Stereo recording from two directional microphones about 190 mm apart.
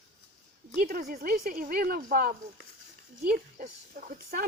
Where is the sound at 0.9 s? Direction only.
50° right (ahead or behind).